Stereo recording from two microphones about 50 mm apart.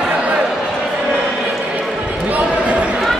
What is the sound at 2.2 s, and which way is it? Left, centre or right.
Basketball bounce, right.